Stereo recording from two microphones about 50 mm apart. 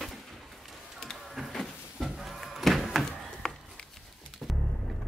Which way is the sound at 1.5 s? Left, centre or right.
Centre.